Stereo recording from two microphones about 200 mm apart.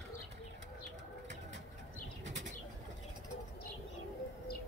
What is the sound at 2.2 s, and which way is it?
Bird flight, 65° right (ahead or behind).